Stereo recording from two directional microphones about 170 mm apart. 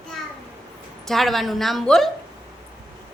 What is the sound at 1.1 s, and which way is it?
A woman's voice, centre (ahead or behind).